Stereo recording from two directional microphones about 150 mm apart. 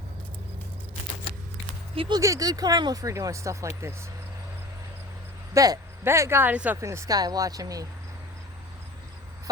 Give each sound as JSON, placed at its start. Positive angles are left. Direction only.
{"t": 2.0, "sound": "speech", "side_deg": -30}
{"t": 5.5, "sound": "speech", "side_deg": -25}